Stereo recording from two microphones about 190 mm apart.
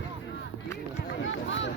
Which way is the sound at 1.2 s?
85° left.